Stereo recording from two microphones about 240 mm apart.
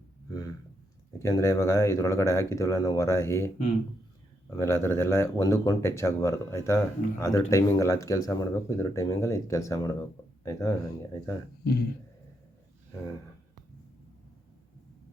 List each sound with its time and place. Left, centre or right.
1.2 s speech: centre
11.6 s speech: left